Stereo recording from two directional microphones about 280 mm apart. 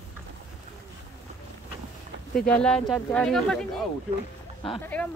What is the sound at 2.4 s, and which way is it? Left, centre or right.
Speech, centre.